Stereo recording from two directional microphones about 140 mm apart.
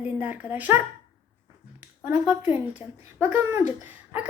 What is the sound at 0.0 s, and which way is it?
Speech, 10° right (ahead or behind).